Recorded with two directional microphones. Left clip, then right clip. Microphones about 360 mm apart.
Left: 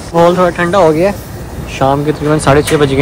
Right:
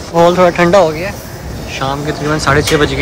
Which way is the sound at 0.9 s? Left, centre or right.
Centre.